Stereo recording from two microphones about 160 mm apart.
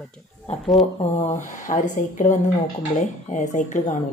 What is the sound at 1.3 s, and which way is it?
Speech, 50° left (ahead or behind).